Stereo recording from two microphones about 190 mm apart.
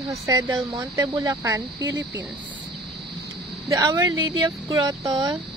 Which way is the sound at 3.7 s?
20° right (ahead or behind).